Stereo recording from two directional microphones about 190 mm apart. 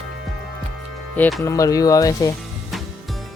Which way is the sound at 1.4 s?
15° left (ahead or behind).